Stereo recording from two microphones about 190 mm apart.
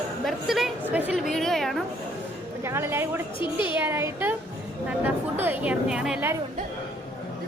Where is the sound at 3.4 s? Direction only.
25° left (ahead or behind).